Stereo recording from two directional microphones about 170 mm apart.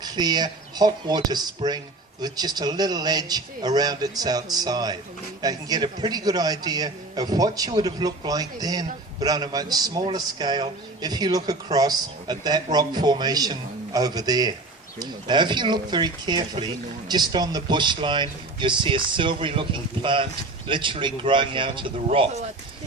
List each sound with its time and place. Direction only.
0.0 s a man's voice: 25° right (ahead or behind)